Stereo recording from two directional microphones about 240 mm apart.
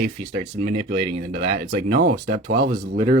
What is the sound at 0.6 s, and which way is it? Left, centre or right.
Speech, right.